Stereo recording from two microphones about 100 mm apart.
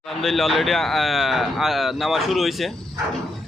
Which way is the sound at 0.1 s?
Centre (ahead or behind).